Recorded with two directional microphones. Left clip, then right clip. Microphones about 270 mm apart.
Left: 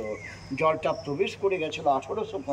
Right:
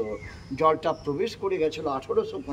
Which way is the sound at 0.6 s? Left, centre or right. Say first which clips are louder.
Right 2 dB; right.